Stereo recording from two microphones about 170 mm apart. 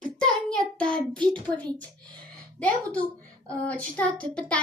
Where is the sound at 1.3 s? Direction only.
5° left (ahead or behind).